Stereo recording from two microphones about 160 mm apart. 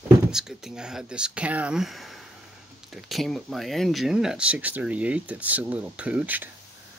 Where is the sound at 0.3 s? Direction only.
5° right (ahead or behind).